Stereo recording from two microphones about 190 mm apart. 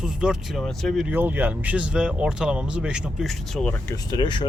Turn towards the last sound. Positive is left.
turn(degrees=25)  # may be behind; listen again after turning